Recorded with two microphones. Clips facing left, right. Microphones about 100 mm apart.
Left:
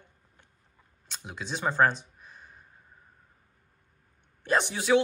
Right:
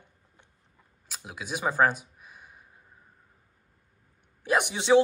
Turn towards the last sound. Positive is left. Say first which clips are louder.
# right 2 dB
turn(degrees=-20)  # may be behind; listen again after turning